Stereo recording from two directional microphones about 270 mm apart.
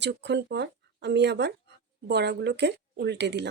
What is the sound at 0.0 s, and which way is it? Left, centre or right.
Speech, right.